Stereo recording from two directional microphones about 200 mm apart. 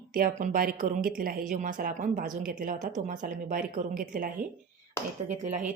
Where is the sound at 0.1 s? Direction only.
45° right (ahead or behind).